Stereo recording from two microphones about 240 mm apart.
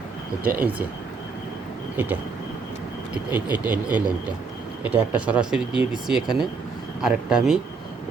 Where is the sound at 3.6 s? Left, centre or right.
Centre.